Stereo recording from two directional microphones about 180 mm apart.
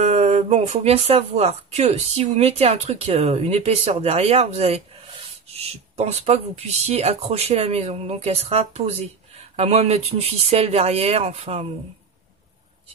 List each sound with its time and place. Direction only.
0.0 s speech: 35° right (ahead or behind)